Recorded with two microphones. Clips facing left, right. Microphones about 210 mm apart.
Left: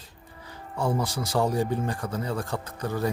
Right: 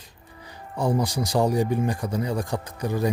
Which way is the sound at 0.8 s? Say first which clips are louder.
Right 3 dB; 15° right (ahead or behind).